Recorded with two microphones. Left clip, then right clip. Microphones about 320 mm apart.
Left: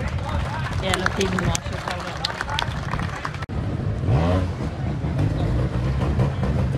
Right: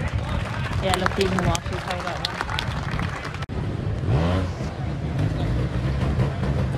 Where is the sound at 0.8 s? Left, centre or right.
Right.